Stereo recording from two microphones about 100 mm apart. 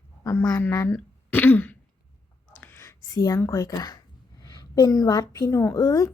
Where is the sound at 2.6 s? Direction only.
25° left (ahead or behind).